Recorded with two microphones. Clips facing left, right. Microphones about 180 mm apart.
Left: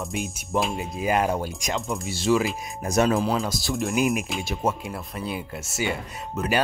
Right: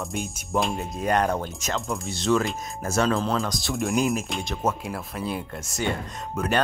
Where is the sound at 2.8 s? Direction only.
15° left (ahead or behind).